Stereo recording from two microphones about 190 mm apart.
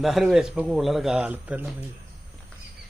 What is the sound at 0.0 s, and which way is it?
Speech, centre (ahead or behind).